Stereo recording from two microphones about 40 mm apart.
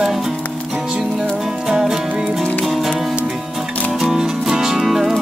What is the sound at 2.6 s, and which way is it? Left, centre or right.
Music, centre.